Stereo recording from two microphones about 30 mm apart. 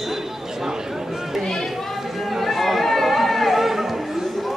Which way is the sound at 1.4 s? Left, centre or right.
Centre.